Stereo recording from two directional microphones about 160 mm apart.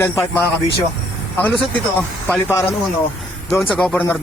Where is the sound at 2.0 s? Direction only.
10° left (ahead or behind).